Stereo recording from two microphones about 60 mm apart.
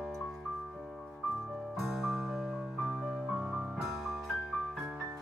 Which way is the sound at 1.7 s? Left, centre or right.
Centre.